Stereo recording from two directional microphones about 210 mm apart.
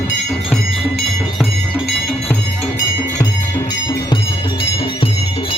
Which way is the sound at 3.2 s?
15° left (ahead or behind).